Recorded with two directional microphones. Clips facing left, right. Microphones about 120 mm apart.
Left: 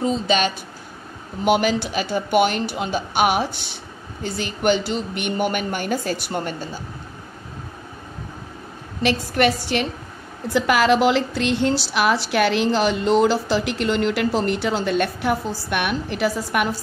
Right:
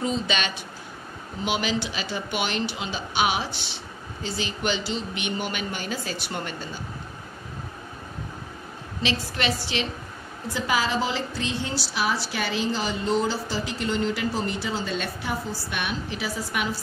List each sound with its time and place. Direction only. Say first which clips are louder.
0.0 s speech: left 6 dB; 40° left (ahead or behind)
9.0 s speech: left 8 dB; 55° left (ahead or behind)
10.5 s a woman's voice: left 8 dB; 65° left (ahead or behind)